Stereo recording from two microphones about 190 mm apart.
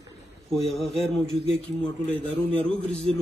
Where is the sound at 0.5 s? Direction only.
Centre (ahead or behind).